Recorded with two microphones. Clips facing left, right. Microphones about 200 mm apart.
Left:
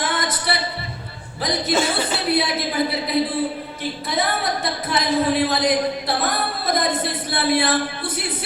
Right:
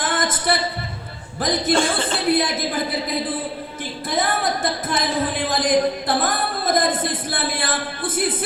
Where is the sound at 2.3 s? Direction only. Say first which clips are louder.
Right 3 dB; 50° right (ahead or behind).